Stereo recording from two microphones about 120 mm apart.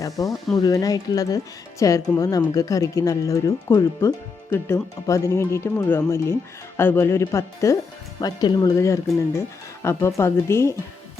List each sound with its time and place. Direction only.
0.0 s speech: 30° left (ahead or behind)